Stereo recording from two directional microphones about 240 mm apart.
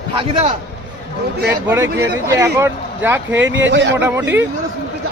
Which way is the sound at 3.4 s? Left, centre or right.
Right.